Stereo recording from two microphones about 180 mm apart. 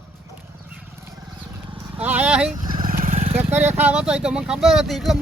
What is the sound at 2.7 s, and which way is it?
Vehicle, 50° right (ahead or behind).